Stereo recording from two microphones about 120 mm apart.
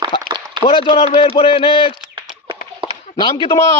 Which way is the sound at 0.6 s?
50° left (ahead or behind).